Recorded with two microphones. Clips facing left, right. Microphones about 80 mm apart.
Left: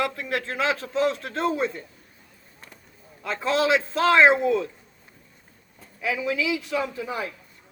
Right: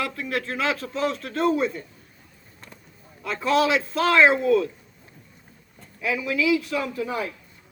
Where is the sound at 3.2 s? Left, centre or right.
Left.